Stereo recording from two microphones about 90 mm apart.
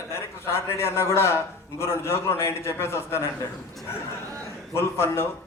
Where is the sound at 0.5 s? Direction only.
30° left (ahead or behind).